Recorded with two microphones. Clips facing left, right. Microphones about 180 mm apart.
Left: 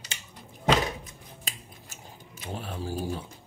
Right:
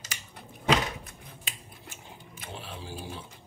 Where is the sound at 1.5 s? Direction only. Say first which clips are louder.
Left 3 dB; 40° left (ahead or behind).